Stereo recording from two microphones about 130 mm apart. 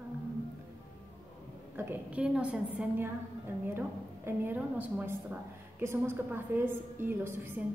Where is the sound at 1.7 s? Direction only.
10° right (ahead or behind).